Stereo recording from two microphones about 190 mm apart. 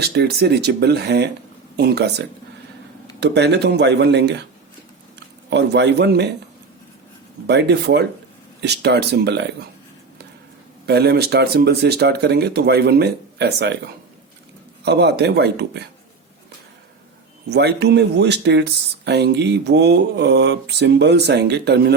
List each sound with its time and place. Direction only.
0.0 s speech: 60° right (ahead or behind)
5.5 s speech: 65° right (ahead or behind)
7.4 s speech: 60° right (ahead or behind)
10.8 s speech: 60° right (ahead or behind)
17.5 s speech: 60° right (ahead or behind)